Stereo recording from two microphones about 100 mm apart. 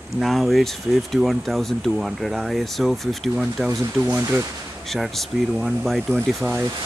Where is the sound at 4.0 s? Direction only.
15° right (ahead or behind).